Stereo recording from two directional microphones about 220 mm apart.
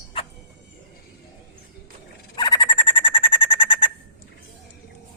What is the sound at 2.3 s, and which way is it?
Bird, 20° left (ahead or behind).